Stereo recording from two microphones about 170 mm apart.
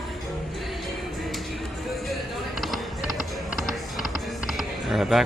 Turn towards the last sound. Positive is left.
turn(degrees=0)  # may be behind; listen again after turning